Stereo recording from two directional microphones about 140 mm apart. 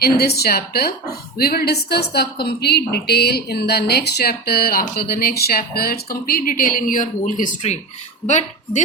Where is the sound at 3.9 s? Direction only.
90° left.